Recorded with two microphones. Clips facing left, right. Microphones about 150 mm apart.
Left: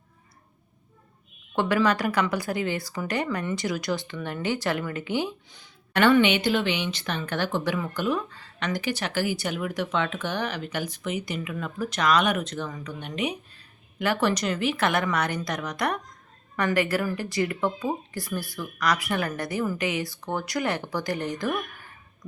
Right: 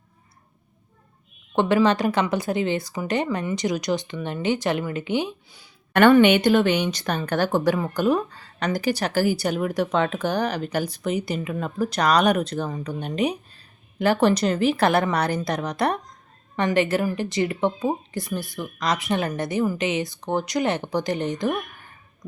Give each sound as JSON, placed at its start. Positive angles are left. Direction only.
{"t": 1.5, "sound": "speech", "side_deg": -25}
{"t": 5.9, "sound": "a woman's voice", "side_deg": -50}